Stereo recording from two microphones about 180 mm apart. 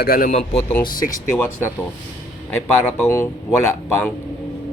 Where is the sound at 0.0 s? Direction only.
55° left (ahead or behind).